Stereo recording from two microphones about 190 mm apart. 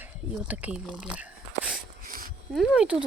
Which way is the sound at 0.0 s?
5° right (ahead or behind).